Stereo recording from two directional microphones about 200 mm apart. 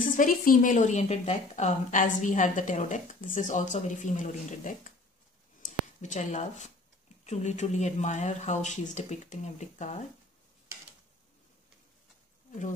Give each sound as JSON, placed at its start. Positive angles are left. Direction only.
{"t": 0.0, "sound": "a woman's voice", "side_deg": 40}